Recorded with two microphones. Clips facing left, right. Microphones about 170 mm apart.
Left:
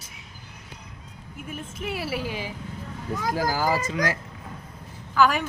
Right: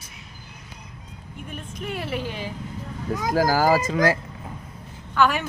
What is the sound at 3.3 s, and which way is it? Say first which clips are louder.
Speech: right 6 dB; 45° right (ahead or behind).